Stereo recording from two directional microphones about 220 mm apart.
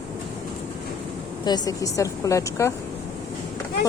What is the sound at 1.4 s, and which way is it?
A woman's voice, 20° left (ahead or behind).